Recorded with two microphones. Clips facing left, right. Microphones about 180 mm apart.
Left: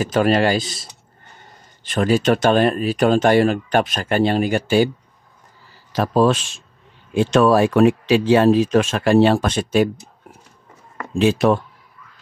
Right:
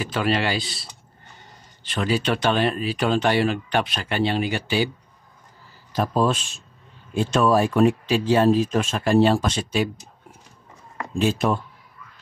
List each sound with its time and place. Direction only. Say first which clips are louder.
0.0 s speech: left 7 dB; 45° left (ahead or behind)
5.9 s speech: left 5 dB; 85° left
7.2 s speech: left 5 dB; 80° left; by 9.8 s 55° left (ahead or behind)
11.1 s speech: left 6 dB; 90° left